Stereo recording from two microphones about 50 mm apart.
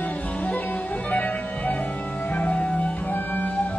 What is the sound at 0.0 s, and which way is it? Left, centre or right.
Music, left.